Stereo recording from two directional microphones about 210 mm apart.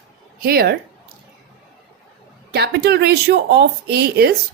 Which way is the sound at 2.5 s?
50° right (ahead or behind).